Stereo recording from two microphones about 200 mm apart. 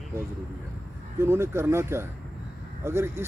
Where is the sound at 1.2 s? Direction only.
10° right (ahead or behind).